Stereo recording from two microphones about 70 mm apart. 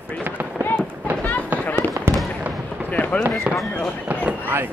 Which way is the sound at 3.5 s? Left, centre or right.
Right.